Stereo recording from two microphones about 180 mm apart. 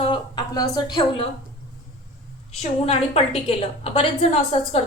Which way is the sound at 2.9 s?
35° left (ahead or behind).